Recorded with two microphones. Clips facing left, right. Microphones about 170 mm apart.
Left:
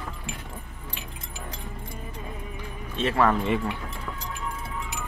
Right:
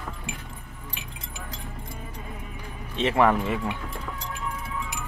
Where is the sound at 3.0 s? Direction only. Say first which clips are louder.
Right 2 dB; 15° right (ahead or behind).